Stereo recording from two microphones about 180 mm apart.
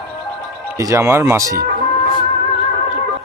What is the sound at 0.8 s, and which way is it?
Speech, 15° right (ahead or behind).